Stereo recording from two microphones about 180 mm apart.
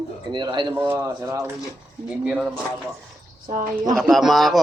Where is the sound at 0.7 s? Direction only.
15° right (ahead or behind).